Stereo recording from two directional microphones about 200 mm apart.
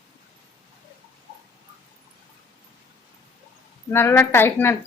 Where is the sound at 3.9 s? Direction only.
10° left (ahead or behind).